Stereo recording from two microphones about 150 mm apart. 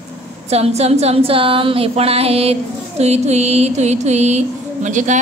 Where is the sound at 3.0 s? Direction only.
45° right (ahead or behind).